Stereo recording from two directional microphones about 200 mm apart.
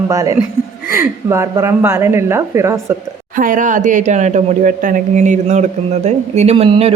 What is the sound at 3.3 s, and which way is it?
Speech, 40° right (ahead or behind).